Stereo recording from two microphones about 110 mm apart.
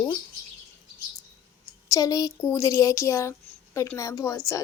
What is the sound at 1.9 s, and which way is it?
A woman's voice, 30° left (ahead or behind).